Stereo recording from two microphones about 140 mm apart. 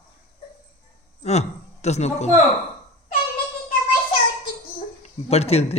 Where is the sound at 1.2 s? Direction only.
50° left (ahead or behind).